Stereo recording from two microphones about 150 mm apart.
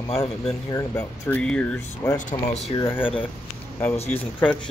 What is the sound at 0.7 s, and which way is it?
Speech, 20° left (ahead or behind).